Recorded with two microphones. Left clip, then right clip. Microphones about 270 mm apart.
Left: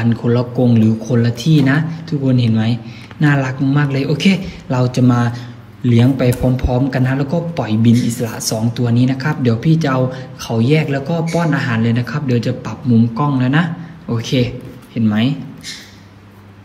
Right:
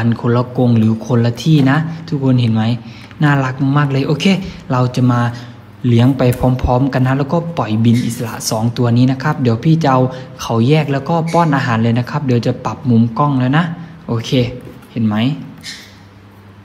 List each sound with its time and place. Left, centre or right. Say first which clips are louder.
0.0 s a man's voice: right 1 dB; centre